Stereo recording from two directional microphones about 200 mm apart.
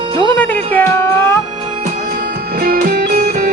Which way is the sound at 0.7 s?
10° left (ahead or behind).